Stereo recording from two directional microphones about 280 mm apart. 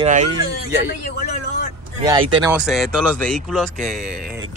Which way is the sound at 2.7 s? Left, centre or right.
Centre.